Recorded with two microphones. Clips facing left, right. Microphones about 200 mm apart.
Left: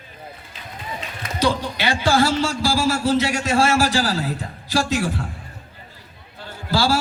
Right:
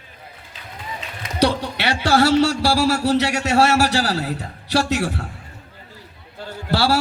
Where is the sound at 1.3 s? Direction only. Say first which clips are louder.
Right 2 dB; 70° right (ahead or behind).